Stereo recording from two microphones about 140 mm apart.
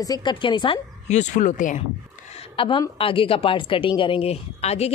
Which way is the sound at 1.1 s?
60° left (ahead or behind).